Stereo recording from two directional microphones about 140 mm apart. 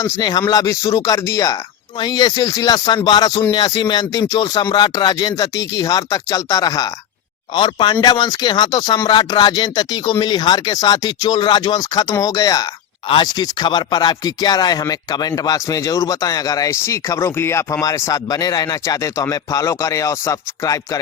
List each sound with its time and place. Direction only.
0.0 s speech: 30° left (ahead or behind)